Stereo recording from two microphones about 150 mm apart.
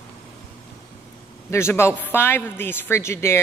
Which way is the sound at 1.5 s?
15° left (ahead or behind).